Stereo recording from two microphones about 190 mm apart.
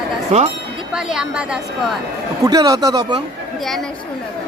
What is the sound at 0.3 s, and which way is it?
Speech, 35° right (ahead or behind).